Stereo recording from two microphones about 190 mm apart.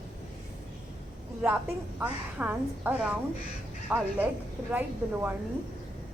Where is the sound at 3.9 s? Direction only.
5° right (ahead or behind).